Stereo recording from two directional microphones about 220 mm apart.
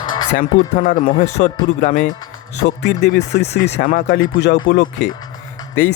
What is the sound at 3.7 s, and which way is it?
Speech, 40° left (ahead or behind).